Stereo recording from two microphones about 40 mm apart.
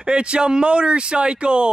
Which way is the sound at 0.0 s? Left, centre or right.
Right.